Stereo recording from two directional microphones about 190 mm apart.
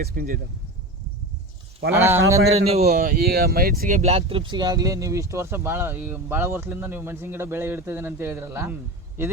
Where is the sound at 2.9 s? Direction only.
50° right (ahead or behind).